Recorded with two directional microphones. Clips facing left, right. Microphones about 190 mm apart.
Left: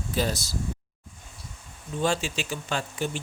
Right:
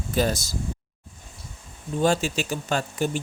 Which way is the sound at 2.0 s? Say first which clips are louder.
Right 4 dB; 40° right (ahead or behind).